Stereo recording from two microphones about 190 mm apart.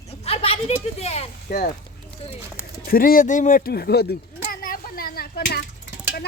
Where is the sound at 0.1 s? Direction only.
30° left (ahead or behind).